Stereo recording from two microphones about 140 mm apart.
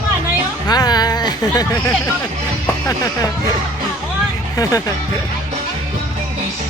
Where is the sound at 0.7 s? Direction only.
30° left (ahead or behind).